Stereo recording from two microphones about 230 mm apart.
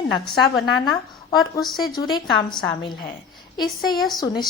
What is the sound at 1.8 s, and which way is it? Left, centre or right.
Speech, centre.